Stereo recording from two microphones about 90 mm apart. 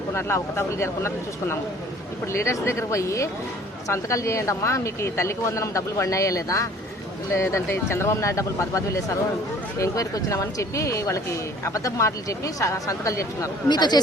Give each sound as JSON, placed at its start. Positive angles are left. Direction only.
{"t": 0.1, "sound": "speech", "side_deg": 30}
{"t": 13.7, "sound": "speech", "side_deg": 55}